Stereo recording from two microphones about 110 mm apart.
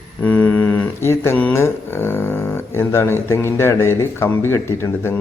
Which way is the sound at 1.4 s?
20° left (ahead or behind).